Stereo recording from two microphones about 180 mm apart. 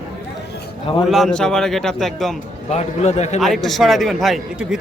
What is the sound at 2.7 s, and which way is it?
Speech, 40° left (ahead or behind).